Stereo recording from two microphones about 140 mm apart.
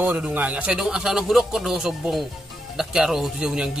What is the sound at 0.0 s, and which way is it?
Speech, 10° right (ahead or behind).